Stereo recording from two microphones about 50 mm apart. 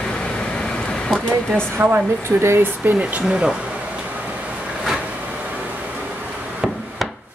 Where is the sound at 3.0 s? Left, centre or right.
Right.